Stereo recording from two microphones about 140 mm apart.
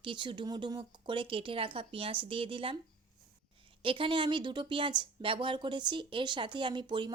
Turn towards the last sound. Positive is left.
turn(degrees=-35)  # may be behind; listen again after turning